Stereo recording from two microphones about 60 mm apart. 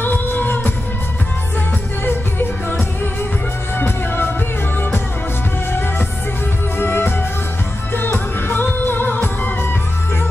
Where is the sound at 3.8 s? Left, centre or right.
Left.